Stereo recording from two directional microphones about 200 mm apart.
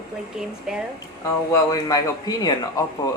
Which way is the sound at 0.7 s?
5° right (ahead or behind).